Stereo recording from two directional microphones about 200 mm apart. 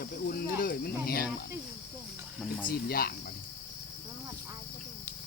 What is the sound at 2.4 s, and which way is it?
Speech, centre (ahead or behind).